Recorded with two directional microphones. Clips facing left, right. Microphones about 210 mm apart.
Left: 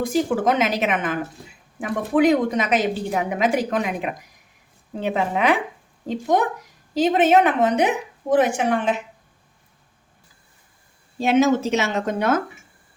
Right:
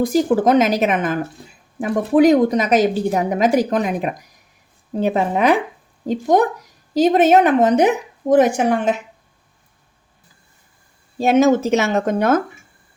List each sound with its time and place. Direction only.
0.0 s a woman's voice: 40° right (ahead or behind)
11.2 s a woman's voice: 45° right (ahead or behind)